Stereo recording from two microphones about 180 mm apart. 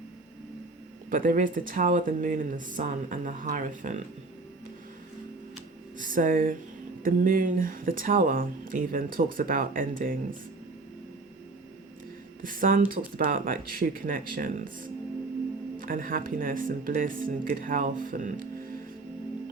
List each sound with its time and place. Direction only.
1.1 s speech: 50° right (ahead or behind)
6.0 s speech: 50° right (ahead or behind)
12.4 s speech: 50° right (ahead or behind)